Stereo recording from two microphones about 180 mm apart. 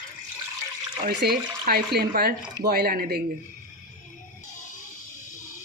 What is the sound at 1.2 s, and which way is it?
Speech, 60° right (ahead or behind).